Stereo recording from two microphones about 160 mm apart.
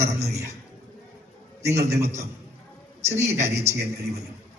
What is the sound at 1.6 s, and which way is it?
A man's voice, 20° right (ahead or behind).